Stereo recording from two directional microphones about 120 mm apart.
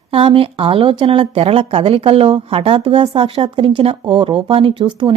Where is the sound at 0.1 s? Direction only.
50° right (ahead or behind).